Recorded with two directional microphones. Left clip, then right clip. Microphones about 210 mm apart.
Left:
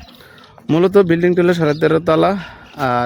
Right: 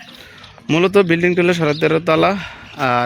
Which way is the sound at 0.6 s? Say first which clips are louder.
Left 1 dB; 20° left (ahead or behind).